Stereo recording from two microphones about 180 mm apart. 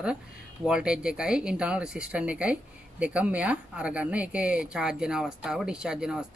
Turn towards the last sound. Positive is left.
turn(degrees=-5)  # may be behind; listen again after turning